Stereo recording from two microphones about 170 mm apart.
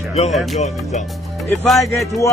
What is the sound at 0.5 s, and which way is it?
Music, 40° left (ahead or behind).